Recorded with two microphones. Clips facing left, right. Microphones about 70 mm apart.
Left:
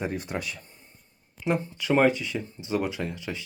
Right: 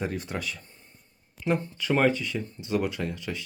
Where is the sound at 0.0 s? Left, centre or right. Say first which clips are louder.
Left 1 dB; centre.